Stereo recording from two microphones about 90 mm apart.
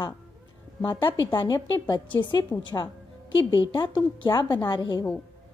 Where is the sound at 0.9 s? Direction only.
60° left (ahead or behind).